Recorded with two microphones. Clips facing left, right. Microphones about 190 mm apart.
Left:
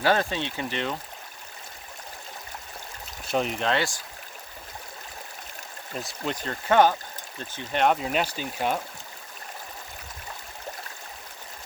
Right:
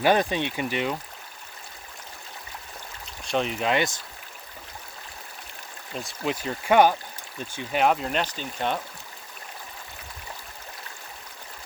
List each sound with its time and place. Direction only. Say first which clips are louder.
0.0 s speech: right 2 dB; 15° right (ahead or behind)
3.2 s speech: even; centre (ahead or behind)
3.7 s speech: right 2 dB; 20° right (ahead or behind)
5.9 s speech: right 2 dB; centre (ahead or behind)